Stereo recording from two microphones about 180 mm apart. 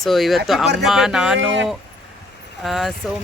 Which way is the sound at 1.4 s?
90° right.